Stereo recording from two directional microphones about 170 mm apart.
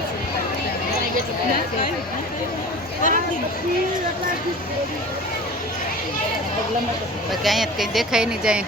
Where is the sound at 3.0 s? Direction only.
50° left (ahead or behind).